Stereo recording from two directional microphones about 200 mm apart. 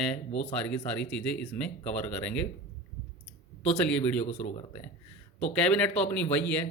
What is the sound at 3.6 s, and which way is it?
Speech, 5° left (ahead or behind).